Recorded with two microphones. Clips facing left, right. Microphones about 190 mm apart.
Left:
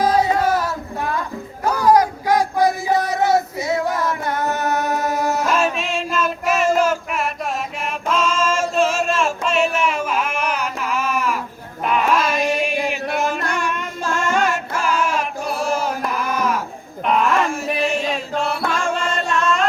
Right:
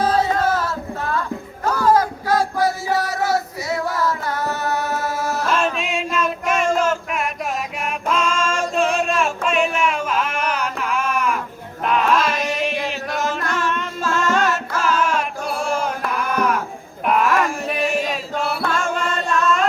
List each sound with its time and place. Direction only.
0.0 s music: 10° left (ahead or behind)
1.6 s child singing: 15° left (ahead or behind)
5.5 s male singing: 5° left (ahead or behind)
7.9 s chant: centre (ahead or behind)
11.9 s a sound: 5° left (ahead or behind)
13.2 s music: 15° left (ahead or behind)